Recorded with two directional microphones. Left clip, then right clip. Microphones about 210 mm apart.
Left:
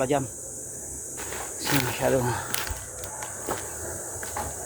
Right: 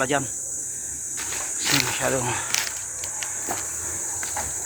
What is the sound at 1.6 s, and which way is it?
Speech, 20° left (ahead or behind).